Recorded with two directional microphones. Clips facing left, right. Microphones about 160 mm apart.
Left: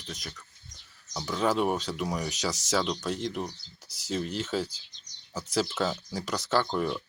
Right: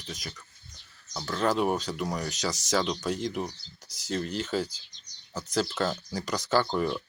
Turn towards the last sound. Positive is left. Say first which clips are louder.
# right 1 dB
turn(degrees=0)  # may be behind; listen again after turning